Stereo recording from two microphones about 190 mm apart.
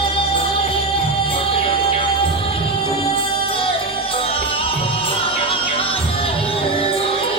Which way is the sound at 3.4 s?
30° left (ahead or behind).